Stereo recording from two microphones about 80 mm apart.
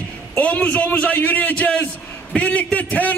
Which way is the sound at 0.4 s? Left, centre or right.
Centre.